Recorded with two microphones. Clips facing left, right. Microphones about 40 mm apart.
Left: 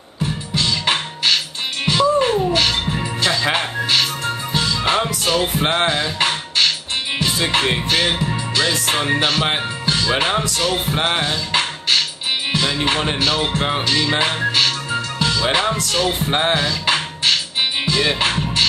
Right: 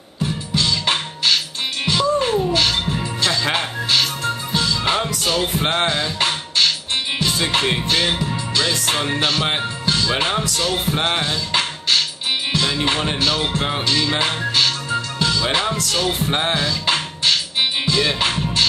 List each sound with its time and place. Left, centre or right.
0.2 s music: centre